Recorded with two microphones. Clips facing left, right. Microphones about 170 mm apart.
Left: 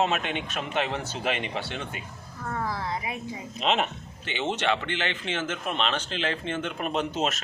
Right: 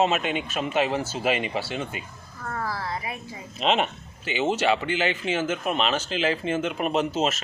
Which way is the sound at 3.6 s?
Centre (ahead or behind).